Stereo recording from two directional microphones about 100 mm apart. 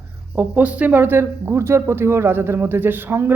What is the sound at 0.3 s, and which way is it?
Speech, 15° right (ahead or behind).